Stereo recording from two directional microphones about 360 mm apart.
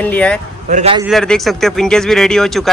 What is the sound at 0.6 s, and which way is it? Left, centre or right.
Speech, centre.